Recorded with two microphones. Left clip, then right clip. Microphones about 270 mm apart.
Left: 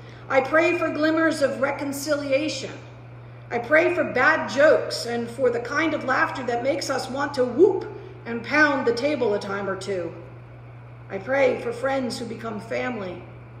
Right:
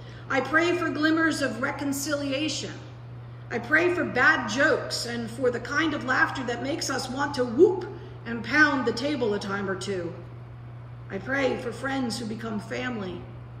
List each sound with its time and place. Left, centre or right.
0.6 s a woman's voice: centre
3.7 s a woman's voice: centre
9.9 s speech: left
11.1 s a woman's voice: centre